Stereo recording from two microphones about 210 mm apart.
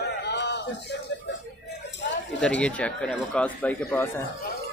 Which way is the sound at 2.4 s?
5° left (ahead or behind).